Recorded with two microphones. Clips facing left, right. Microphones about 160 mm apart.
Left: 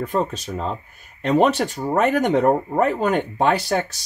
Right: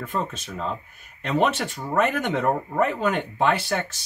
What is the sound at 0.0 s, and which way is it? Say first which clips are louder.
Speech: left 6 dB; 40° left (ahead or behind).